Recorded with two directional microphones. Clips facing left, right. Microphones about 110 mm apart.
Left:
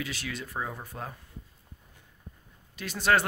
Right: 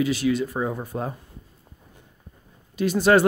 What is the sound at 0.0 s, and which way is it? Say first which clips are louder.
Speech: right 14 dB; 10° right (ahead or behind).